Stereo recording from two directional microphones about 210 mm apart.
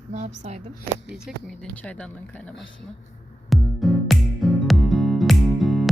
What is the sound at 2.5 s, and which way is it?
Speech, 60° left (ahead or behind).